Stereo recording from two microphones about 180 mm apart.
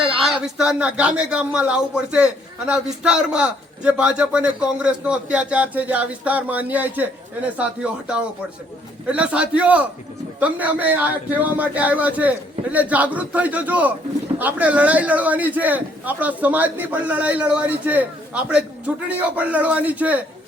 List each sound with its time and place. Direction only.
0.0 s speech: centre (ahead or behind)
19.0 s speech: 10° right (ahead or behind)